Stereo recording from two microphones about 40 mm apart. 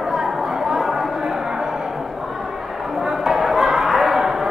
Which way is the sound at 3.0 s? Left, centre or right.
Centre.